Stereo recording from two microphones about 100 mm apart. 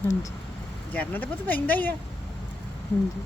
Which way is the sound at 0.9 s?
15° left (ahead or behind).